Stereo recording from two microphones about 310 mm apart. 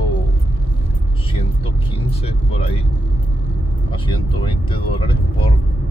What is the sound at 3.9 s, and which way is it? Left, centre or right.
Speech, centre.